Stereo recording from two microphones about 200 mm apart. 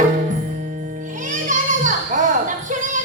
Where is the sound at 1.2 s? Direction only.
40° right (ahead or behind).